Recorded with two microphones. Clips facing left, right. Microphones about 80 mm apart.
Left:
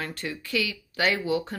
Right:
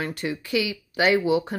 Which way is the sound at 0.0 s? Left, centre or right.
Centre.